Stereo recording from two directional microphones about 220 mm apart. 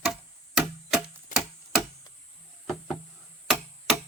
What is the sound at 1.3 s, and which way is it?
Tick-tock, 35° left (ahead or behind).